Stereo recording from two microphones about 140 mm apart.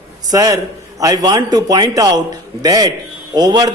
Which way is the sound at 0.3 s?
25° right (ahead or behind).